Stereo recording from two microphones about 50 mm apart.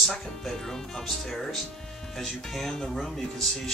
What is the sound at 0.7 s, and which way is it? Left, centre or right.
Speech, centre.